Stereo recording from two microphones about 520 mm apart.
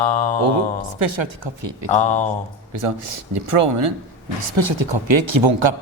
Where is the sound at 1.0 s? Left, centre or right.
Right.